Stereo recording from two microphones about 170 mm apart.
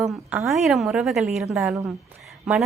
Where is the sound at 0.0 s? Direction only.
Centre (ahead or behind).